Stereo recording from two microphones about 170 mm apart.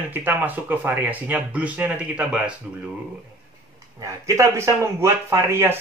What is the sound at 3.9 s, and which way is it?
Speech, 20° right (ahead or behind).